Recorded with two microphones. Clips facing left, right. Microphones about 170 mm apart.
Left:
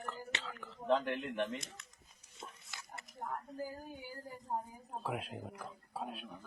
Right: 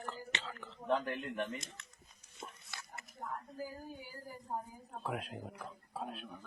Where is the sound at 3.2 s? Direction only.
50° left (ahead or behind).